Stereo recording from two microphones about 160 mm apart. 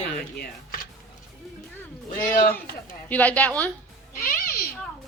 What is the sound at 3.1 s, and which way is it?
Speech, 10° left (ahead or behind).